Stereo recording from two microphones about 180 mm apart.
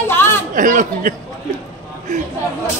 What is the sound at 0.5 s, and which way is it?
Speech, 45° right (ahead or behind).